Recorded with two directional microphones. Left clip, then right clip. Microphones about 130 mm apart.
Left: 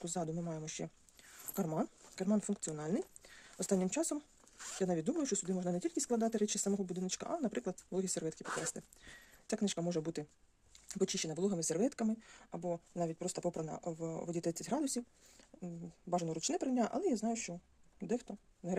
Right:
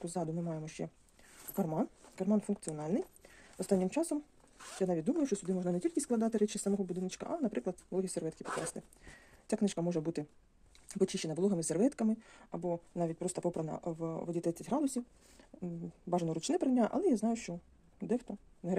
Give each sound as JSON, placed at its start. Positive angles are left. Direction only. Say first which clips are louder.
{"t": 0.0, "sound": "speech", "louder": "right 2 dB", "side_deg": 15}
{"t": 15.4, "sound": "speech", "louder": "right 5 dB", "side_deg": 0}
{"t": 18.0, "sound": "speech", "louder": "right 3 dB", "side_deg": 10}